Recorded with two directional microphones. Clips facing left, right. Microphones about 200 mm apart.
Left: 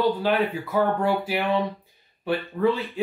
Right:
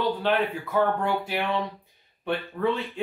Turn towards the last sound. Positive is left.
turn(degrees=5)  # may be behind; listen again after turning